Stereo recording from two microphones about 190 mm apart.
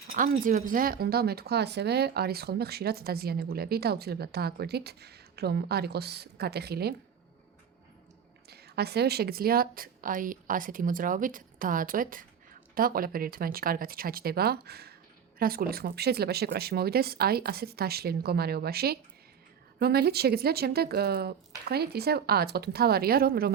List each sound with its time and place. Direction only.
0.1 s speech: 45° right (ahead or behind)
8.4 s a woman's voice: 55° right (ahead or behind)